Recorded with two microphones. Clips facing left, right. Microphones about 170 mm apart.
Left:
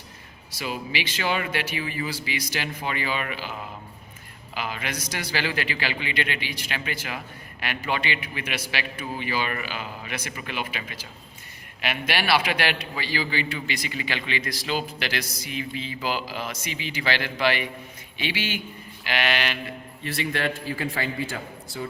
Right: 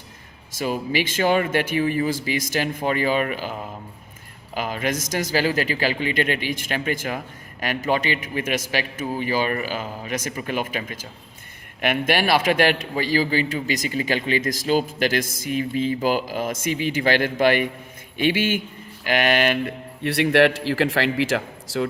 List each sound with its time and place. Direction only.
0.5 s a man's voice: 45° right (ahead or behind)
4.5 s a man's voice: 45° right (ahead or behind); by 21.8 s 85° right